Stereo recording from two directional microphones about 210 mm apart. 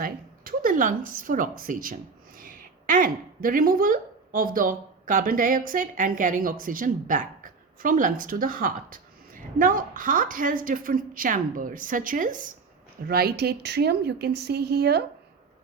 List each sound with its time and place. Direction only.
0.0 s a woman's voice: 45° right (ahead or behind)